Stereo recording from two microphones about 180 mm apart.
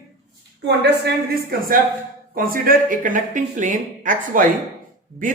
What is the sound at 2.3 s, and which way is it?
Speech, 50° right (ahead or behind).